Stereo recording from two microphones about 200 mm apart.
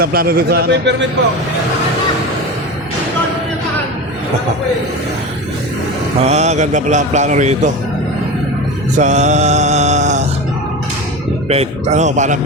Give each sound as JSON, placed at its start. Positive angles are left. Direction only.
{"t": 0.0, "sound": "a man's voice", "side_deg": -50}
{"t": 6.2, "sound": "speech", "side_deg": -35}
{"t": 9.0, "sound": "a sound", "side_deg": -35}
{"t": 11.4, "sound": "speech", "side_deg": -30}